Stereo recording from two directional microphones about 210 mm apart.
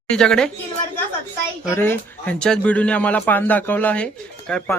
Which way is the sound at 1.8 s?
10° left (ahead or behind).